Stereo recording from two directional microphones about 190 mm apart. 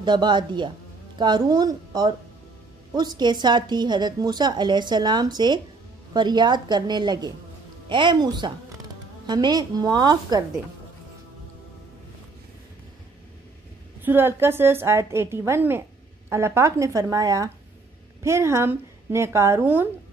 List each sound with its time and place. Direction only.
0.0 s a woman's voice: 25° right (ahead or behind)
14.0 s a woman's voice: 10° right (ahead or behind)